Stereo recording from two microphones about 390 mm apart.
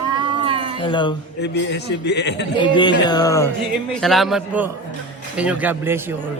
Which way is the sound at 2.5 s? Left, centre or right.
Centre.